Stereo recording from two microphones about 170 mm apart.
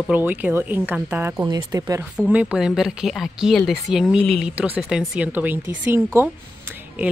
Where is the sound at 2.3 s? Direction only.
10° right (ahead or behind).